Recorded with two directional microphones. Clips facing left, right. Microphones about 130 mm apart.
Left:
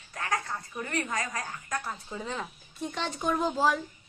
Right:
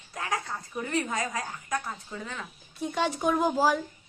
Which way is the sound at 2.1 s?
20° left (ahead or behind).